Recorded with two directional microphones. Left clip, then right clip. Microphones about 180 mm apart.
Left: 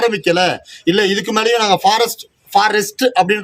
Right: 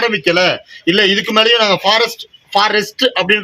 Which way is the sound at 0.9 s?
30° left (ahead or behind).